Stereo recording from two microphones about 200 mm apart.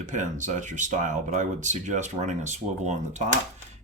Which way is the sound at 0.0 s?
40° right (ahead or behind).